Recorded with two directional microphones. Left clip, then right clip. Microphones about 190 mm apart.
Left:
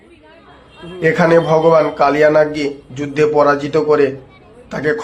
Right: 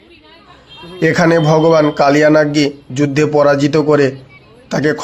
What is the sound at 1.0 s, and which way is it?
A man's voice, 45° right (ahead or behind).